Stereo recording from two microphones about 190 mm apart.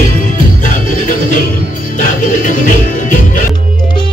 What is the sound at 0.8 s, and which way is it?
Music, 45° left (ahead or behind).